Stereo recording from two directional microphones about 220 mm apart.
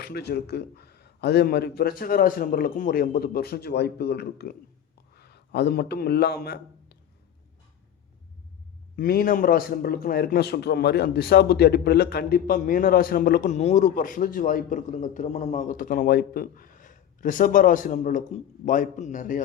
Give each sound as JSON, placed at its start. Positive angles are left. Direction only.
{"t": 0.0, "sound": "a man's voice", "side_deg": 45}
{"t": 9.0, "sound": "a man's voice", "side_deg": 40}